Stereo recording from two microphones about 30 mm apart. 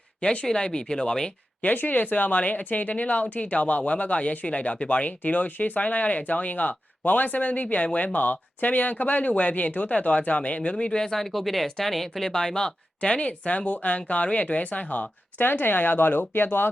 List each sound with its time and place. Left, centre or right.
0.4 s speech: left
1.6 s speech: left
10.1 s speech: left
10.8 s speech: left
11.0 s speech: centre
12.3 s speech: left
13.0 s speech: left
15.4 s speech: left